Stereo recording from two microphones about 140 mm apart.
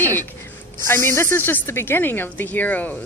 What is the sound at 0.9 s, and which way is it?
A woman's voice, 15° left (ahead or behind).